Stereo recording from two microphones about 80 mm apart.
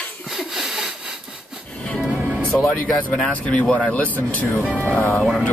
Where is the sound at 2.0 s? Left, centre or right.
Centre.